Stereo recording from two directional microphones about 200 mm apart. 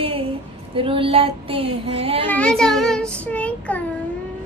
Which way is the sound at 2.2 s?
5° left (ahead or behind).